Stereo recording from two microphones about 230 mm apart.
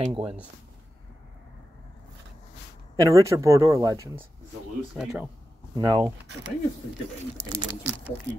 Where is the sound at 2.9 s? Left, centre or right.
Centre.